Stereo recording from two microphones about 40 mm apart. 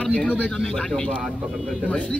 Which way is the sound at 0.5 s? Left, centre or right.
Centre.